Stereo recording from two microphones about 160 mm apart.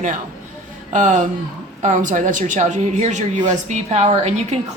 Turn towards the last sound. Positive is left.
turn(degrees=-45)  # may be behind; listen again after turning